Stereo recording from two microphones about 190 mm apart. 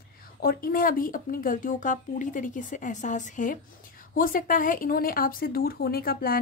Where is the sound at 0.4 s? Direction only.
50° left (ahead or behind).